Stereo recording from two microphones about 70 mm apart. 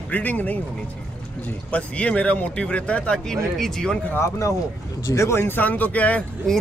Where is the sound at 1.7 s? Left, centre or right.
Centre.